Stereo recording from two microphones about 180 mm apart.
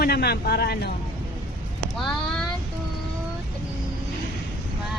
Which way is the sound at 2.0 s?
5° left (ahead or behind).